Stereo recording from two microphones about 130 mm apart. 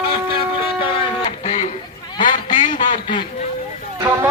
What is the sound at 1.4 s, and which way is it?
Music, 60° left (ahead or behind).